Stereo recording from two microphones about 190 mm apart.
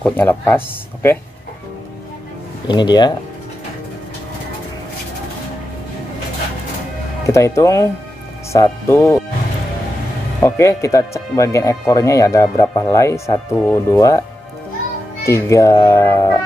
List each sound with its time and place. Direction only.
0.0 s speech: 10° left (ahead or behind)
2.7 s speech: 25° left (ahead or behind)
7.2 s speech: 15° left (ahead or behind)
10.4 s speech: 15° left (ahead or behind)
15.2 s speech: 15° left (ahead or behind)